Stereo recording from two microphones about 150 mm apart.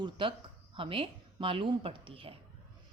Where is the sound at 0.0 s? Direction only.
35° right (ahead or behind).